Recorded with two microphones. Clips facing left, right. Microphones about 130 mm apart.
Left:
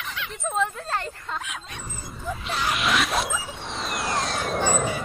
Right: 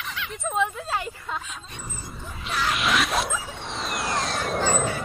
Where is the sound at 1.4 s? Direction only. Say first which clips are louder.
Left 3 dB; 75° left (ahead or behind).